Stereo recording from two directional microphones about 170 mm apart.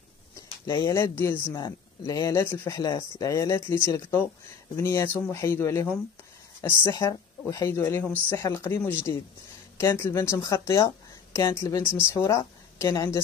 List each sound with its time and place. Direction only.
0.7 s a woman's voice: 15° left (ahead or behind)